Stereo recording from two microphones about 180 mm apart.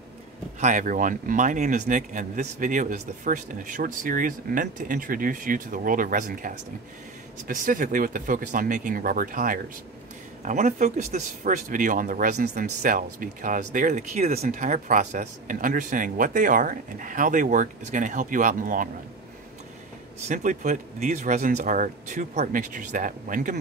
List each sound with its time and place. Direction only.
0.6 s speech: 45° right (ahead or behind)
20.2 s speech: 45° right (ahead or behind)